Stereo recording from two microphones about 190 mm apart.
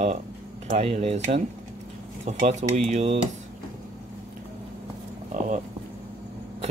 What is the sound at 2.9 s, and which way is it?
Speech, 35° right (ahead or behind).